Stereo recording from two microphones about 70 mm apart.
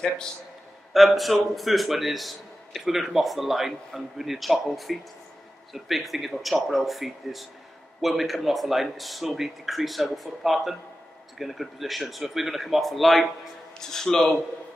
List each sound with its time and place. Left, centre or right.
0.9 s a man's voice: centre